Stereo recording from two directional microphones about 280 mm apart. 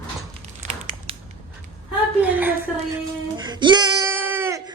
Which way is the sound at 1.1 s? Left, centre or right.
Centre.